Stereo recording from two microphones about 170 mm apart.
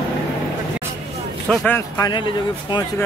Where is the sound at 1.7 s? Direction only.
20° left (ahead or behind).